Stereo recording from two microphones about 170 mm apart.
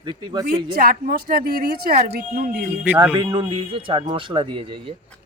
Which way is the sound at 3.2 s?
25° right (ahead or behind).